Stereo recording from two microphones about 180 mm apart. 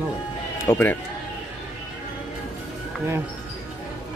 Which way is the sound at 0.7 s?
10° left (ahead or behind).